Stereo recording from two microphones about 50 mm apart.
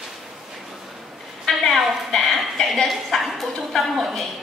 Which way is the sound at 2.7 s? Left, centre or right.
Centre.